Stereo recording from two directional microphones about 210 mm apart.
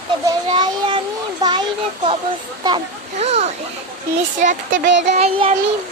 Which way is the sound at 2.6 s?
25° right (ahead or behind).